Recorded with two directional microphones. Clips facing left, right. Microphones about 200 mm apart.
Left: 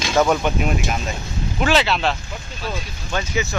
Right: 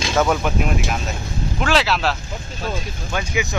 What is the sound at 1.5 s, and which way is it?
Speech, centre (ahead or behind).